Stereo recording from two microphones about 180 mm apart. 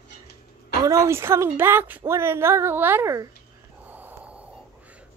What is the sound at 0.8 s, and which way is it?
A woman's voice, 15° right (ahead or behind).